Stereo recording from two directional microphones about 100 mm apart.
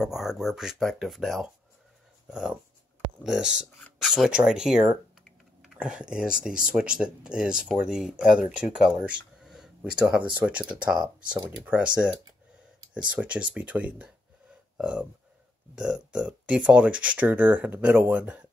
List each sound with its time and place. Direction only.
0.0 s speech: 5° right (ahead or behind)
4.0 s typing: 5° right (ahead or behind)
5.8 s speech: 10° right (ahead or behind)
10.6 s speech: 50° right (ahead or behind)
10.9 s speech: 10° right (ahead or behind)
13.2 s speech: 15° right (ahead or behind)